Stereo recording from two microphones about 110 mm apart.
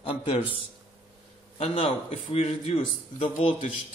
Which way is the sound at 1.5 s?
60° left (ahead or behind).